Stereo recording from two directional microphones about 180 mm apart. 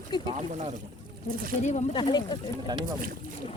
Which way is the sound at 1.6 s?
40° left (ahead or behind).